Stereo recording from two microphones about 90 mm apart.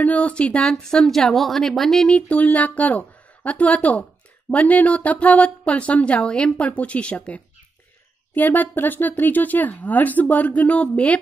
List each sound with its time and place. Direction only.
0.0 s a woman's voice: 15° left (ahead or behind)